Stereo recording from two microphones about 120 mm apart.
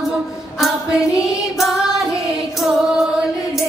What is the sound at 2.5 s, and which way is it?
Music, 5° right (ahead or behind).